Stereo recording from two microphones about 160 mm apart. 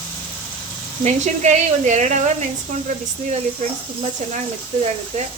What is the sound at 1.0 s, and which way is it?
Speech, 50° right (ahead or behind).